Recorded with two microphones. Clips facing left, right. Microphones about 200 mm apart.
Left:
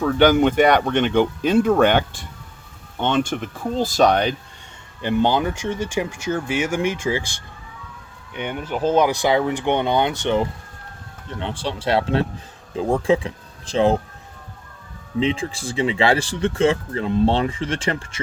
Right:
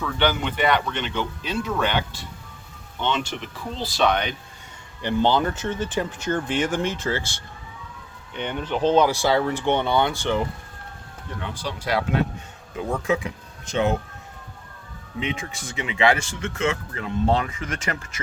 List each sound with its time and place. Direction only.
0.0 s speech: 45° left (ahead or behind)
5.0 s speech: 15° left (ahead or behind); by 14.0 s 30° left (ahead or behind)
15.2 s speech: 30° left (ahead or behind)